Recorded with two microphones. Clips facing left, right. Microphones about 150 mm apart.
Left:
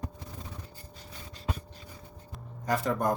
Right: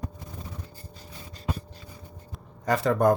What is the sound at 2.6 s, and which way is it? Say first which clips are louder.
Speech: right 6 dB; 85° right.